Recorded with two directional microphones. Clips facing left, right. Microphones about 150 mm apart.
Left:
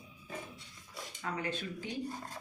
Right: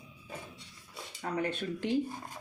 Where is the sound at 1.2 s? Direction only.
35° right (ahead or behind).